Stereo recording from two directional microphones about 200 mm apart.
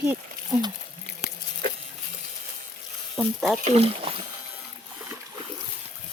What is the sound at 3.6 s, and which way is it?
Speech, 30° right (ahead or behind).